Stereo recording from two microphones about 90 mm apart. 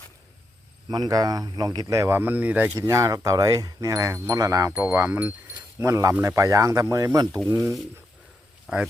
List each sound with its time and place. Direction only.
0.9 s speech: 45° right (ahead or behind)
2.1 s speech: 20° right (ahead or behind)
2.7 s speech: 35° right (ahead or behind)
4.7 s speech: 25° right (ahead or behind)
5.8 s speech: 35° right (ahead or behind)